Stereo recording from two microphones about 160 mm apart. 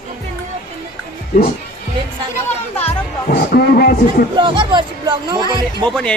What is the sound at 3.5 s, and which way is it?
Speech, 70° left (ahead or behind).